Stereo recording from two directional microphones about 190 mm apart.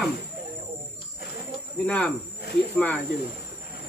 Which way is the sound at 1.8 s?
5° left (ahead or behind).